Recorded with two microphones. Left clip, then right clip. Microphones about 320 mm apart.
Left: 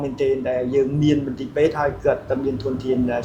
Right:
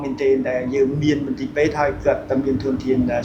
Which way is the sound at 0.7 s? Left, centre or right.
Left.